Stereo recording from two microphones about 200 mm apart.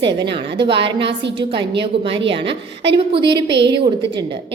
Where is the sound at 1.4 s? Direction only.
25° right (ahead or behind).